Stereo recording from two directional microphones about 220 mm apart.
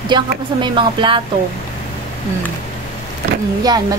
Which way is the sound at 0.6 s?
20° right (ahead or behind).